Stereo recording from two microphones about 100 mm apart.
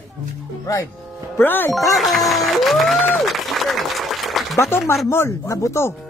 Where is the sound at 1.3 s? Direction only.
20° left (ahead or behind).